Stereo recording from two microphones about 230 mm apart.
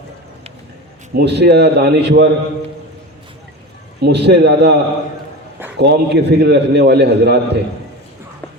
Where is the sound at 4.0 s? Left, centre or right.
Right.